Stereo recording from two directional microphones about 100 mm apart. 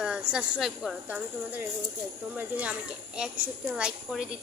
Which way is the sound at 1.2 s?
15° right (ahead or behind).